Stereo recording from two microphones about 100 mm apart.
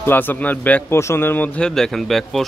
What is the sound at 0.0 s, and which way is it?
Speech, 20° left (ahead or behind).